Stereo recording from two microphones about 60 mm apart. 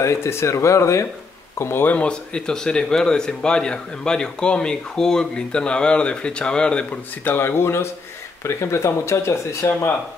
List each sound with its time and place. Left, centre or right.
0.0 s speech: left
1.6 s speech: left
1.9 s speech: centre
7.2 s speech: left
9.7 s speech: left